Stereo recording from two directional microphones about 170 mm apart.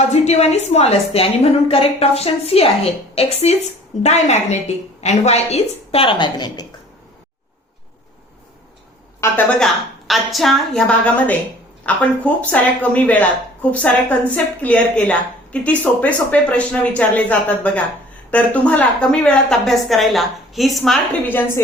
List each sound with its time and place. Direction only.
0.1 s a sound: 40° left (ahead or behind)
0.7 s a woman's voice: 40° left (ahead or behind)
9.2 s a woman's voice: 10° left (ahead or behind)